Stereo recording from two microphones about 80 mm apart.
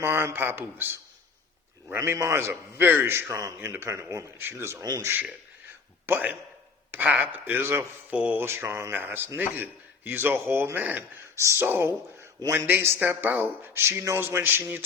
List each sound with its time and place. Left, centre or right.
0.0 s speech: right
2.0 s speech: right
3.2 s speech: right
4.8 s speech: right
6.1 s speech: right
8.1 s speech: centre
8.4 s speech: right
11.3 s speech: right